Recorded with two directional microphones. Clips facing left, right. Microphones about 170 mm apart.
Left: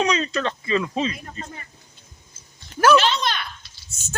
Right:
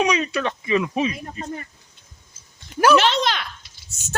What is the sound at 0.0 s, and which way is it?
Speech, 10° right (ahead or behind).